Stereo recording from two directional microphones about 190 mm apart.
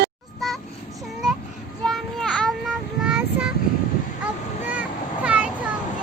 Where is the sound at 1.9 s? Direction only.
Centre (ahead or behind).